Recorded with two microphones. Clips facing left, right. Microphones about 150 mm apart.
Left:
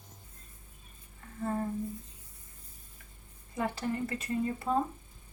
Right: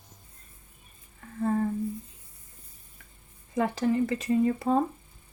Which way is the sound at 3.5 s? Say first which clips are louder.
Right 7 dB; 90° right.